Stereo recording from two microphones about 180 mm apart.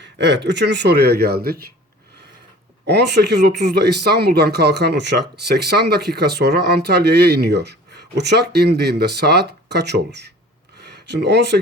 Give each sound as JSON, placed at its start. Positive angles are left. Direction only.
{"t": 0.0, "sound": "speech", "side_deg": -75}
{"t": 2.8, "sound": "speech", "side_deg": -70}